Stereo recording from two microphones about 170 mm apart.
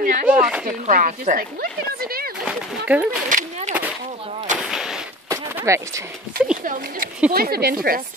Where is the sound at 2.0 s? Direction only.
60° right (ahead or behind).